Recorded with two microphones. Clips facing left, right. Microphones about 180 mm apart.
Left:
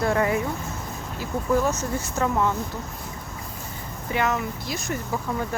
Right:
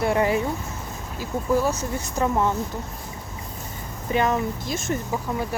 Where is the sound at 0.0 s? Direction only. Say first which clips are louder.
Right 1 dB; 25° right (ahead or behind).